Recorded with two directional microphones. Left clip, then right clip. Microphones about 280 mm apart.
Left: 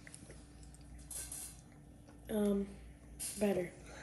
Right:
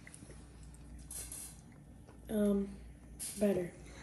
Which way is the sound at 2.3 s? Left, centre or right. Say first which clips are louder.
Right 2 dB; centre.